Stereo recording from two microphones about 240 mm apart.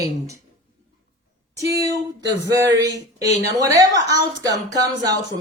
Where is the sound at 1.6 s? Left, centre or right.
Centre.